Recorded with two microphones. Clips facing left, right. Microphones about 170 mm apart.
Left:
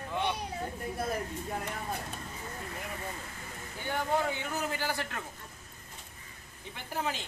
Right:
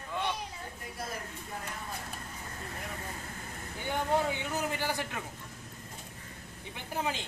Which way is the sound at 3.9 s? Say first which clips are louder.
Right 1 dB; 15° right (ahead or behind).